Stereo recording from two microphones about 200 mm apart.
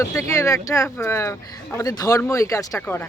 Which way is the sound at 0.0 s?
15° left (ahead or behind).